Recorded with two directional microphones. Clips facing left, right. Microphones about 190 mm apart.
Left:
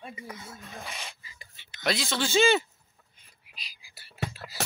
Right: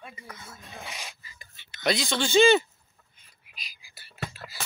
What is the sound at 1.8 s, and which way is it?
Speech, centre (ahead or behind).